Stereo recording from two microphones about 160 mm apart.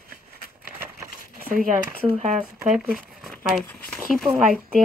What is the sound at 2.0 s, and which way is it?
Speech, 45° right (ahead or behind).